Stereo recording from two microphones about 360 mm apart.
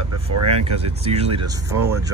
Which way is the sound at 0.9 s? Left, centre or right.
Centre.